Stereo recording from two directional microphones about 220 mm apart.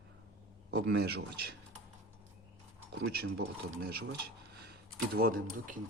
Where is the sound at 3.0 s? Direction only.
55° right (ahead or behind).